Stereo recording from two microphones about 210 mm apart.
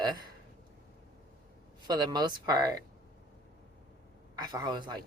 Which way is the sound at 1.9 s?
20° right (ahead or behind).